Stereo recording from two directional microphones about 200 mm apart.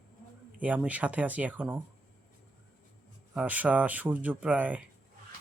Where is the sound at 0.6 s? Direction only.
5° right (ahead or behind).